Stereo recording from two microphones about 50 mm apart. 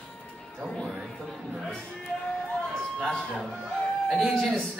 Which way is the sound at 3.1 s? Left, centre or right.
Centre.